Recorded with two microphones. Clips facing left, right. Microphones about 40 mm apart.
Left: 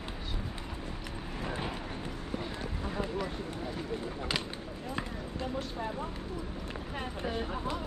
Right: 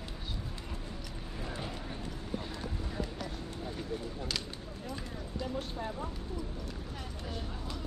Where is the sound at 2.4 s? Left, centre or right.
Left.